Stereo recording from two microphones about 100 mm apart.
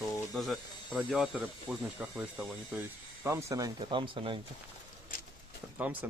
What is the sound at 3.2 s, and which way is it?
Speech, 30° right (ahead or behind).